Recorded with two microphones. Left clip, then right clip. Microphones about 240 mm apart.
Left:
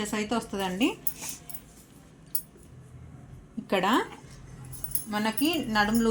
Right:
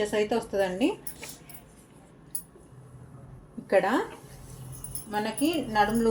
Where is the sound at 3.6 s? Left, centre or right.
Left.